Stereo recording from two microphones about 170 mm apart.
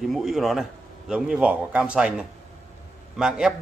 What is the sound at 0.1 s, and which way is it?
A man's voice, centre (ahead or behind).